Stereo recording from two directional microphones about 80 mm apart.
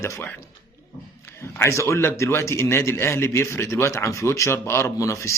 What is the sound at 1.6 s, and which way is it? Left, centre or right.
A man's voice, left.